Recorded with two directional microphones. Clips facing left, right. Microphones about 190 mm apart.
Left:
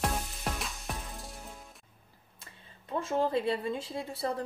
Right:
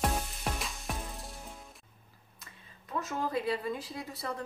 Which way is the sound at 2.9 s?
30° left (ahead or behind).